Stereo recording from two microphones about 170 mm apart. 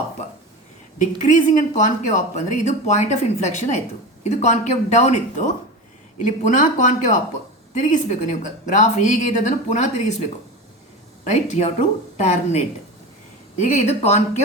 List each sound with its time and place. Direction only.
1.2 s speech: 45° left (ahead or behind)
11.3 s speech: 40° left (ahead or behind)